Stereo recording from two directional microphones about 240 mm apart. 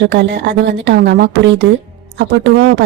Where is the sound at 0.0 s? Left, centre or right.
Right.